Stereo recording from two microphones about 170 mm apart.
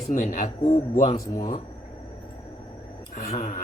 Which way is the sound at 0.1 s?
50° left (ahead or behind).